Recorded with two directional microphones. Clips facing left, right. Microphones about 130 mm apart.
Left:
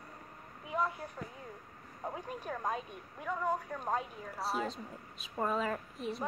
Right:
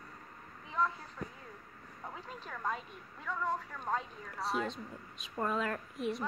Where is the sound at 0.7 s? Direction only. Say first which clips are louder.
Even; 15° left (ahead or behind).